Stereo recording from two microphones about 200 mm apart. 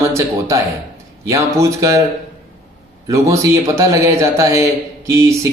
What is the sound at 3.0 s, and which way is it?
Speech, 15° right (ahead or behind).